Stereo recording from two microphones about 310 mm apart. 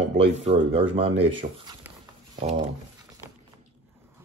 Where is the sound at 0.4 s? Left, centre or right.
Centre.